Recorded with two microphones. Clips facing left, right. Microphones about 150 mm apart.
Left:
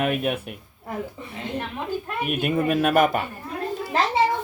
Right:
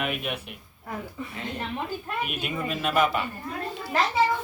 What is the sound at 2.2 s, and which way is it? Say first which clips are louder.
Speech: left 8 dB; 50° left (ahead or behind).